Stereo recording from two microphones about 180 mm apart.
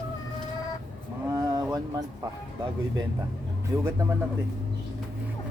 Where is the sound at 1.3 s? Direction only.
20° right (ahead or behind).